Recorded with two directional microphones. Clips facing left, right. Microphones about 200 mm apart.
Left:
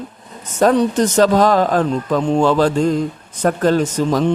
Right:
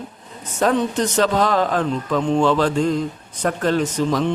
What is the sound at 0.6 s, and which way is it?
Speech, 40° left (ahead or behind).